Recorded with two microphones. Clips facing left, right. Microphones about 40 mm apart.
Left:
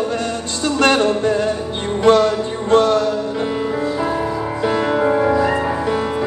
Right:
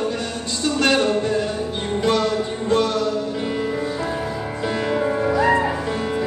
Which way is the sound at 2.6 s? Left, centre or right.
Left.